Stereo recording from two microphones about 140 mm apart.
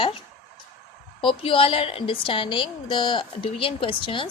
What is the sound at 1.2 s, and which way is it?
A woman's voice, 40° left (ahead or behind).